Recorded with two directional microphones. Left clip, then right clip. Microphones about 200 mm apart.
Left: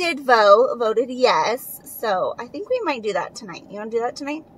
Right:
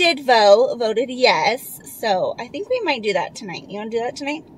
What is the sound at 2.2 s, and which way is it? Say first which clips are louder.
Speech: right 2 dB; 20° right (ahead or behind).